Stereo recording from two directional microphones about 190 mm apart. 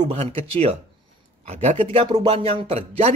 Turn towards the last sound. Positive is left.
turn(degrees=-35)  # may be behind; listen again after turning